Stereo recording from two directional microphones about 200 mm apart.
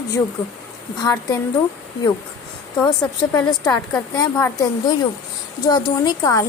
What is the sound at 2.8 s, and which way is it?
A woman's voice, 15° left (ahead or behind).